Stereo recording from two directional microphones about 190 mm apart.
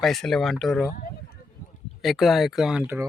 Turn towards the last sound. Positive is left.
turn(degrees=-5)  # may be behind; listen again after turning